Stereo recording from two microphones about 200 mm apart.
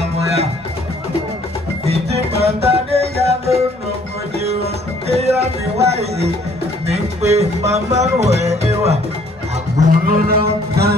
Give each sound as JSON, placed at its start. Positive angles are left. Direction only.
{"t": 1.9, "sound": "music", "side_deg": -30}
{"t": 5.0, "sound": "music", "side_deg": -30}
{"t": 9.8, "sound": "music", "side_deg": -45}